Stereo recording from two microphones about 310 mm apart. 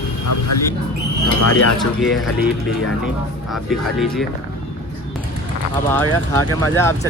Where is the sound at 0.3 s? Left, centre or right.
Left.